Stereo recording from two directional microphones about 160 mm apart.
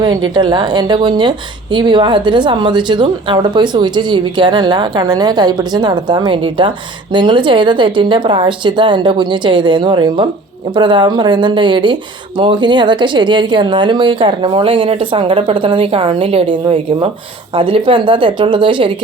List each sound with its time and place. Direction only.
0.0 s a woman's voice: 25° right (ahead or behind)